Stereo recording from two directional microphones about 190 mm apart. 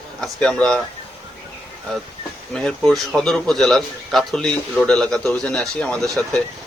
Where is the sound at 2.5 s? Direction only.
5° left (ahead or behind).